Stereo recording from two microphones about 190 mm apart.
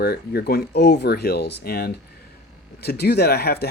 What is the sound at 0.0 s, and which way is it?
Speech, 55° left (ahead or behind).